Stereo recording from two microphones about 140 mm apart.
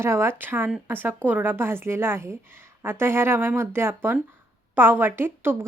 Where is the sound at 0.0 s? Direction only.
20° right (ahead or behind).